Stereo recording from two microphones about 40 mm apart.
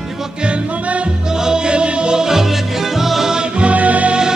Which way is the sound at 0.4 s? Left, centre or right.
Right.